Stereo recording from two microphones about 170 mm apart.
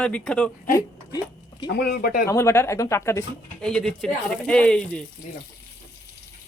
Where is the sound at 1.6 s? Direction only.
65° left (ahead or behind).